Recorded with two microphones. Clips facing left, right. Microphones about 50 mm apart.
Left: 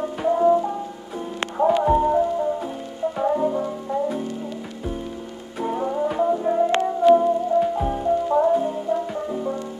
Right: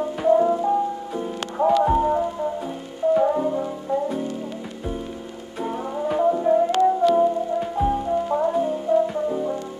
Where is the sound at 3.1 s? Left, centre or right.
Centre.